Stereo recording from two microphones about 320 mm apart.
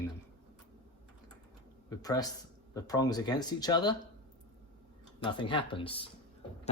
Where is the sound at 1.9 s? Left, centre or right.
Centre.